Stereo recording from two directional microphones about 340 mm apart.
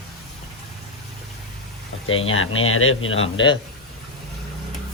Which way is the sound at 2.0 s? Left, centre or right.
Left.